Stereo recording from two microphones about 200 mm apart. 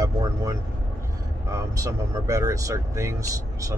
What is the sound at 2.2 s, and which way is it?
Speech, 15° right (ahead or behind).